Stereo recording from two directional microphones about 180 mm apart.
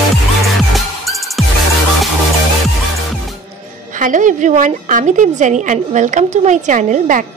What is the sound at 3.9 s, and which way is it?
A woman's voice, 45° right (ahead or behind).